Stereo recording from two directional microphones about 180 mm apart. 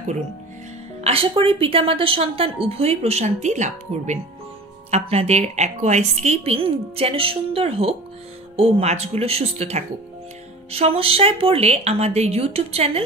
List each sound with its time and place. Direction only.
1.0 s a woman's voice: 30° right (ahead or behind)